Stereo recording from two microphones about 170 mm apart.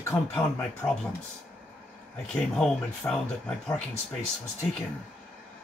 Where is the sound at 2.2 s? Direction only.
5° left (ahead or behind).